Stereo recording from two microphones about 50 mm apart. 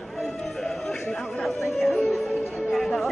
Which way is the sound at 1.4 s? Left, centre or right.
Centre.